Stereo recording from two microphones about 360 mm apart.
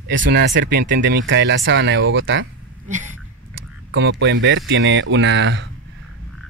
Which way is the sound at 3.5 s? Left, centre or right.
Right.